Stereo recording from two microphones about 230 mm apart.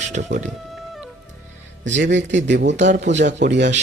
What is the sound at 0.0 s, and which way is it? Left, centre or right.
Speech, right.